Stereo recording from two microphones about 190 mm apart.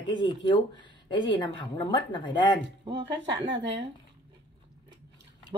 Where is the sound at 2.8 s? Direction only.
25° right (ahead or behind).